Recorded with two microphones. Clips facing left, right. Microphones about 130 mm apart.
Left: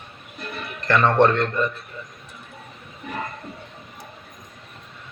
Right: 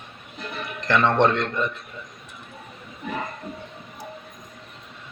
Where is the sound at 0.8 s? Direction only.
20° right (ahead or behind).